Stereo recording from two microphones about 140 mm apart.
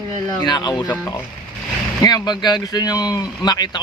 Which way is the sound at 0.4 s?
30° left (ahead or behind).